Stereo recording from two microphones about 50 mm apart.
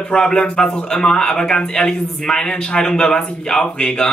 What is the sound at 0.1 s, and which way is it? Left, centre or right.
Speech, centre.